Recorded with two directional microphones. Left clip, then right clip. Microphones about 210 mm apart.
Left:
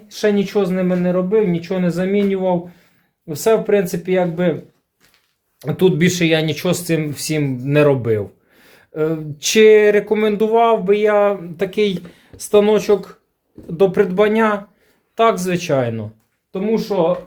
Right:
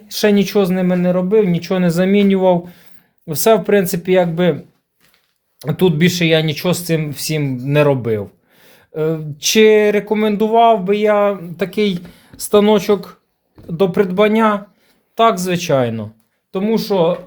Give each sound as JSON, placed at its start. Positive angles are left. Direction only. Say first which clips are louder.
{"t": 0.1, "sound": "speech", "louder": "right 3 dB", "side_deg": -50}
{"t": 5.5, "sound": "speech", "louder": "even", "side_deg": -20}
{"t": 16.5, "sound": "speech", "louder": "right 2 dB", "side_deg": -45}